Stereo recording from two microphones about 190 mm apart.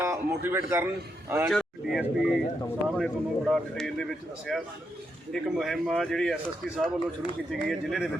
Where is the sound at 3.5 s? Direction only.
5° left (ahead or behind).